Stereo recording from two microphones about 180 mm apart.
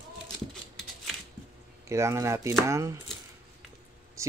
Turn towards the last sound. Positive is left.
turn(degrees=-15)  # may be behind; listen again after turning